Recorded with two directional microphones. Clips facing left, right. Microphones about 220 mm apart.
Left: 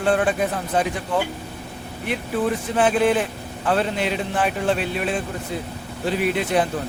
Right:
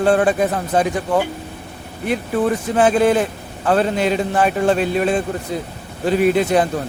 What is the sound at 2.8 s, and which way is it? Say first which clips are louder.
A man's voice: right 4 dB; 40° right (ahead or behind).